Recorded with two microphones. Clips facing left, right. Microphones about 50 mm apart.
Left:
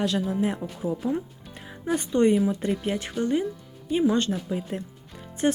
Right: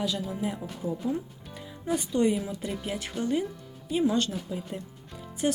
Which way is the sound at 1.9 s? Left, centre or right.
Left.